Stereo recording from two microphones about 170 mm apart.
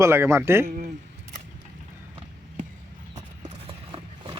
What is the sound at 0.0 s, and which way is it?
Speech, 15° right (ahead or behind).